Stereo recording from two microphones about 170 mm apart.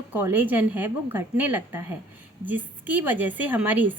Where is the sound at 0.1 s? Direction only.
10° right (ahead or behind).